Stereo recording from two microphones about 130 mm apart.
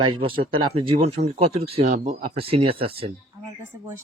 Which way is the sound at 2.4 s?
45° right (ahead or behind).